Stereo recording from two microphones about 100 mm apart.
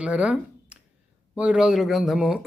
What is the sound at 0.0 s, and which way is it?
Speech, 10° right (ahead or behind).